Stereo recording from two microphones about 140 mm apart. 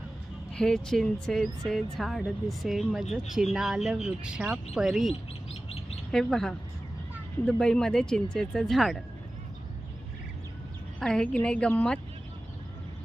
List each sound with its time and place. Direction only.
0.5 s speech: 5° left (ahead or behind)
5.6 s chirp: 45° left (ahead or behind)
6.1 s speech: 5° left (ahead or behind)
11.0 s a woman's voice: 5° left (ahead or behind)